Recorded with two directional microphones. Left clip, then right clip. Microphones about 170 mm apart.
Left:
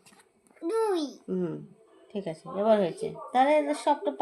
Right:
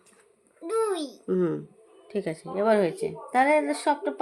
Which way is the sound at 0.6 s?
5° right (ahead or behind).